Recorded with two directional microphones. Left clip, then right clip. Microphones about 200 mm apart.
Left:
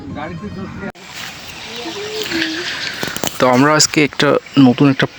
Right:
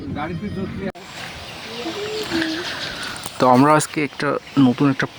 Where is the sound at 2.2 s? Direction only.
10° right (ahead or behind).